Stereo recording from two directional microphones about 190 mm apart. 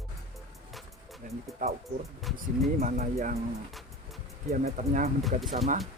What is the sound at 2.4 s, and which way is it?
Speech, 45° right (ahead or behind).